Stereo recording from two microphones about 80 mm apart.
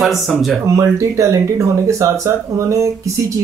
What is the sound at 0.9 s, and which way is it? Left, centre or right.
Speech, right.